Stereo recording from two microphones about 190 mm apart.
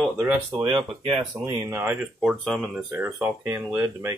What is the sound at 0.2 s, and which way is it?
Speech, 10° right (ahead or behind).